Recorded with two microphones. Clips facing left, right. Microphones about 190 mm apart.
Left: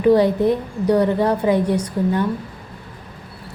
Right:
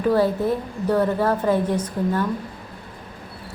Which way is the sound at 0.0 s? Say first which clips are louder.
Left 5 dB; 15° left (ahead or behind).